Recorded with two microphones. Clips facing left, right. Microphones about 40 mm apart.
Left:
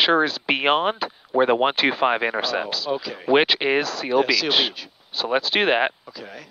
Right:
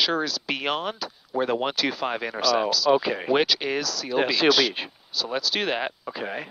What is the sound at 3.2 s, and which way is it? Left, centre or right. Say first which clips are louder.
Speech: left 8 dB; left.